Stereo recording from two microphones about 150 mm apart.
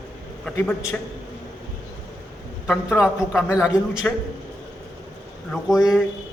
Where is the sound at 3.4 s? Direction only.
20° left (ahead or behind).